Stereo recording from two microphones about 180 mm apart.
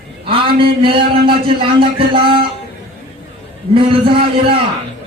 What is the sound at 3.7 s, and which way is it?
Speech, 30° right (ahead or behind).